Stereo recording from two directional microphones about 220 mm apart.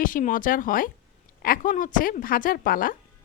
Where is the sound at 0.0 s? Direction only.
40° left (ahead or behind).